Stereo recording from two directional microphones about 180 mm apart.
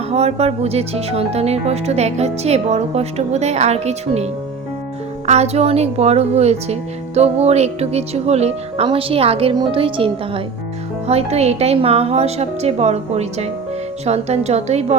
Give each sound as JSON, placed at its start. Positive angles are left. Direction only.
{"t": 0.1, "sound": "speech", "side_deg": -35}